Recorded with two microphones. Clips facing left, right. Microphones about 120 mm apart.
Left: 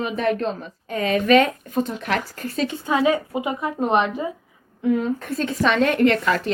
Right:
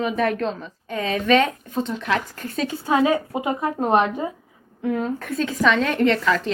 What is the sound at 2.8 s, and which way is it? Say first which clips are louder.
A woman's voice: right 1 dB; 20° right (ahead or behind).